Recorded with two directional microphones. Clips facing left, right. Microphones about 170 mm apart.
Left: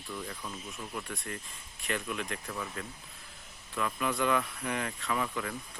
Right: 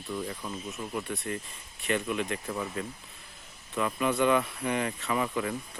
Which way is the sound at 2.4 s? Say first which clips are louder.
Right 5 dB; 20° right (ahead or behind).